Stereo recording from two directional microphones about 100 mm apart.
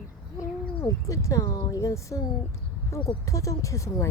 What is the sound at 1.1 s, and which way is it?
Speech, 30° left (ahead or behind).